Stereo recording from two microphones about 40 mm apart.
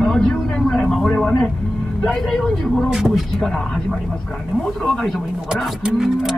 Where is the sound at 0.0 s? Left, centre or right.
Centre.